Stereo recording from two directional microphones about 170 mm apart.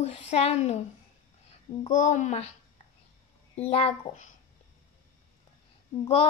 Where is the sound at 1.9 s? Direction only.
45° left (ahead or behind).